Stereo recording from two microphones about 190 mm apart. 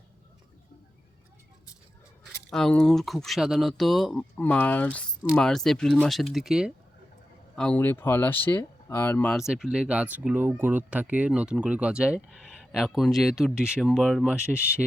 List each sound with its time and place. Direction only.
2.5 s speech: 5° left (ahead or behind)
9.4 s speech: 5° right (ahead or behind)